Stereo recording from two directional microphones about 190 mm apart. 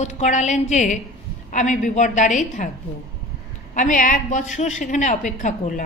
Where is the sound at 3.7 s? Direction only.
45° left (ahead or behind).